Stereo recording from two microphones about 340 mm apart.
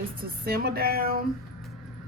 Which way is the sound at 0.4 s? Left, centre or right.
Right.